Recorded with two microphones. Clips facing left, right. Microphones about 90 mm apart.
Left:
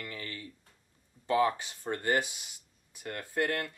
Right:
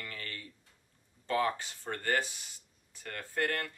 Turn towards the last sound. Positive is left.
turn(degrees=15)  # may be behind; listen again after turning